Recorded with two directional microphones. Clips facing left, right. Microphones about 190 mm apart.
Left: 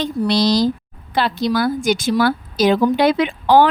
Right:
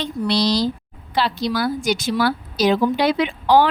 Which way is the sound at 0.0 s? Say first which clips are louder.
Left 3 dB; 45° left (ahead or behind).